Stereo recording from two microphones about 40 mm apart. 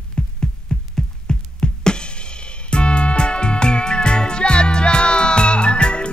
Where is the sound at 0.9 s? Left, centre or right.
Centre.